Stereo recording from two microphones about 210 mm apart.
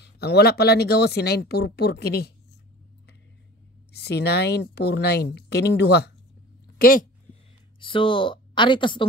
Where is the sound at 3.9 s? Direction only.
50° left (ahead or behind).